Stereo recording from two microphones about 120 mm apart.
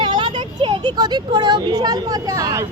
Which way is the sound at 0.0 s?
40° right (ahead or behind).